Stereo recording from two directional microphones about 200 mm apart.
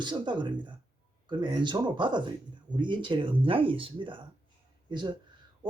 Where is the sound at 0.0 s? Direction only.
25° right (ahead or behind).